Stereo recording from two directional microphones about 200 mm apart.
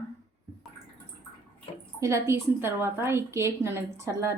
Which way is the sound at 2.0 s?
15° right (ahead or behind).